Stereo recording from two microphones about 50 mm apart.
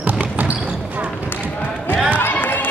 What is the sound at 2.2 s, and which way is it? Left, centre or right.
Basketball bounce, left.